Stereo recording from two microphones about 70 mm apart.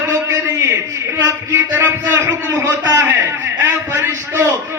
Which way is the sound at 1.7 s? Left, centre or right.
Right.